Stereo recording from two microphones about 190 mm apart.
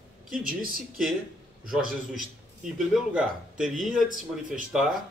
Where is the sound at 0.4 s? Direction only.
50° right (ahead or behind).